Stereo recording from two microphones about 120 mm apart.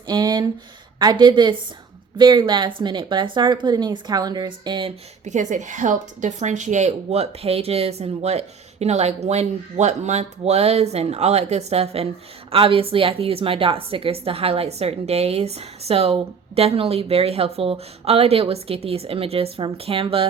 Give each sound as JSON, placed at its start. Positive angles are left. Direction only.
{"t": 0.1, "sound": "a sound", "side_deg": -35}
{"t": 0.9, "sound": "speech", "side_deg": -35}
{"t": 5.2, "sound": "a woman's voice", "side_deg": -85}